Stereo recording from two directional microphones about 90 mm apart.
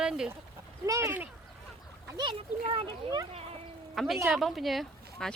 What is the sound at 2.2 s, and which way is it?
Speech, 75° right (ahead or behind).